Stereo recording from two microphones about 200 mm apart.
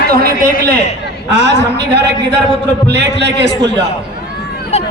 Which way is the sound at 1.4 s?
60° right (ahead or behind).